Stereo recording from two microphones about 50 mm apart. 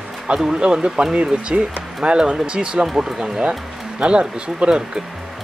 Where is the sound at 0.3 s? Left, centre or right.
Centre.